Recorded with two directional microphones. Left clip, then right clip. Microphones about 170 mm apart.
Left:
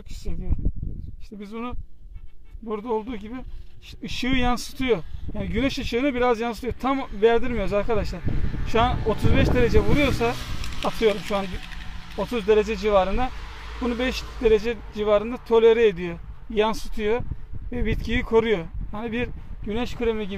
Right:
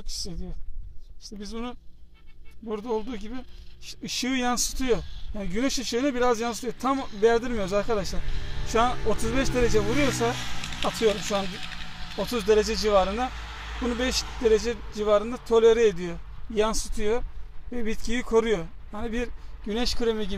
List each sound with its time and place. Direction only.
1.4 s speech: 30° left (ahead or behind)
10.3 s a sound: 40° right (ahead or behind)
10.9 s speech: 35° left (ahead or behind)
11.4 s a sound: 20° right (ahead or behind)
12.2 s speech: 30° left (ahead or behind)
13.4 s vehicle: 35° right (ahead or behind)
13.8 s a man's voice: 35° left (ahead or behind)
16.7 s speech: 20° left (ahead or behind)
17.6 s speech: 35° left (ahead or behind)
18.2 s speech: 20° left (ahead or behind)
19.0 s speech: 35° left (ahead or behind)
19.6 s speech: 25° left (ahead or behind)